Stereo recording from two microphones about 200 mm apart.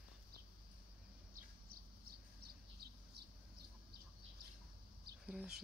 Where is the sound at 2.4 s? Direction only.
50° right (ahead or behind).